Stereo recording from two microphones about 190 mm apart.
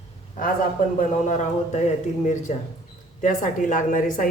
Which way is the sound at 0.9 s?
40° left (ahead or behind).